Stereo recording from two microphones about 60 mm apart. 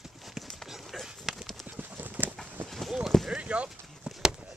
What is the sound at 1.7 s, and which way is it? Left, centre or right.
Clip-clop, right.